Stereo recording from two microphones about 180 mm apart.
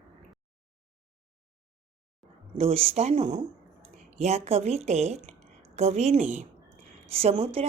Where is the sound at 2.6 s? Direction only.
35° right (ahead or behind).